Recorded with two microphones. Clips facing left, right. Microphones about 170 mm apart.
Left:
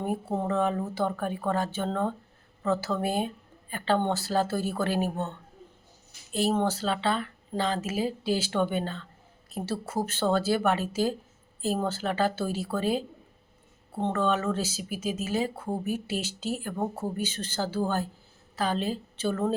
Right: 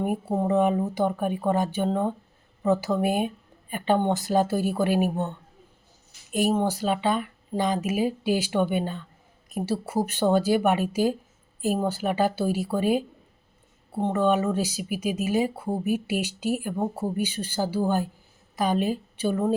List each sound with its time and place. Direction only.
0.0 s speech: 15° right (ahead or behind)
6.3 s a woman's voice: 15° right (ahead or behind)